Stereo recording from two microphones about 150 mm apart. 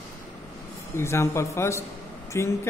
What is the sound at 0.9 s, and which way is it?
A man's voice, 15° left (ahead or behind).